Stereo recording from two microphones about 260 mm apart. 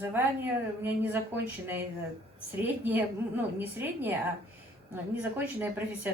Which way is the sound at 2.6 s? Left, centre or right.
Centre.